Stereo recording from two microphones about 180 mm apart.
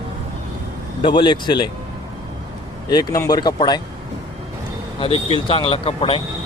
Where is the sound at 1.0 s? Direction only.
25° left (ahead or behind).